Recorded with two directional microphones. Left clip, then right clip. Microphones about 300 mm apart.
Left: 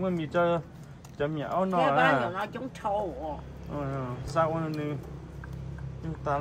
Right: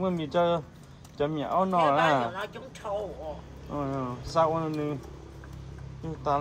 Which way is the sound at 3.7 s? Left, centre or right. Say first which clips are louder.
Right 3 dB; centre.